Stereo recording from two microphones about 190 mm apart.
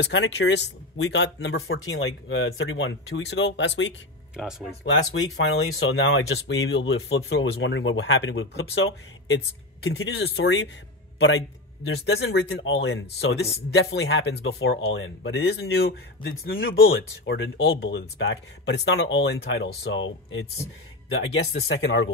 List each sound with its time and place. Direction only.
0.0 s speech: 70° left (ahead or behind)
4.4 s speech: centre (ahead or behind)
5.9 s speech: 85° left; by 14.8 s 60° left (ahead or behind)
14.9 s speech: 75° left (ahead or behind); by 16.7 s 50° left (ahead or behind)
17.2 s speech: 80° left
17.8 s speech: 70° left (ahead or behind)
21.1 s speech: 90° left; by 22.1 s 75° left (ahead or behind)